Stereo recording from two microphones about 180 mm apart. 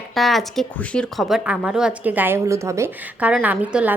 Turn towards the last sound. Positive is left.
turn(degrees=-5)  # may be behind; listen again after turning